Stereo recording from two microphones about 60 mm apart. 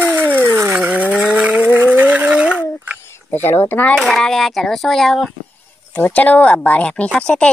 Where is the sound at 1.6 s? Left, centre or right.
Right; by 2.6 s centre.